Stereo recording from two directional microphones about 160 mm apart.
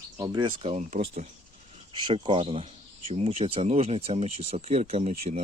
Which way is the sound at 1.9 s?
30° right (ahead or behind).